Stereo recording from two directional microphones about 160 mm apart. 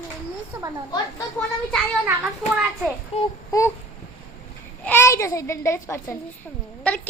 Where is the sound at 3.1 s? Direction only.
40° left (ahead or behind).